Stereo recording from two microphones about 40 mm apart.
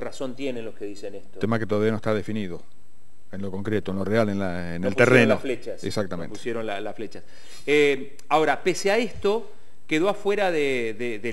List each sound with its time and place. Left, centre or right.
0.0 s a man's voice: centre